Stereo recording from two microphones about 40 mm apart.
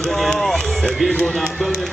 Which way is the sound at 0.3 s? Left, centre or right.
Centre.